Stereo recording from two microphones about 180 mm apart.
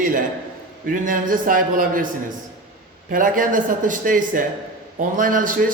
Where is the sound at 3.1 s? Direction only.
50° right (ahead or behind).